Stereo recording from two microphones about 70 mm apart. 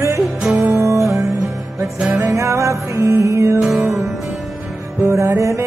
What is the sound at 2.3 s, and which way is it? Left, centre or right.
Music, right.